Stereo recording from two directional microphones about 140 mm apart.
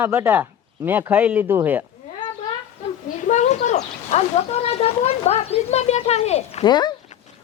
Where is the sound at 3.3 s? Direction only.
60° left (ahead or behind).